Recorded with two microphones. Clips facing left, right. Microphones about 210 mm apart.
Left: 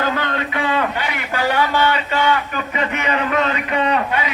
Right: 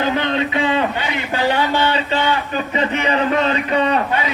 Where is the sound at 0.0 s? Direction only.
20° right (ahead or behind).